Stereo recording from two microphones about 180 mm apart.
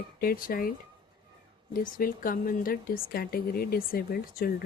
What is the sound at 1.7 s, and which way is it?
A woman's voice, 50° left (ahead or behind).